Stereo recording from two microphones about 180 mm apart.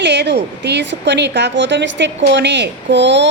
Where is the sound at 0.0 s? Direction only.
70° right (ahead or behind).